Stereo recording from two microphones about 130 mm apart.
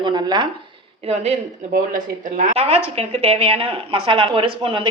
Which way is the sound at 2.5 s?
50° right (ahead or behind).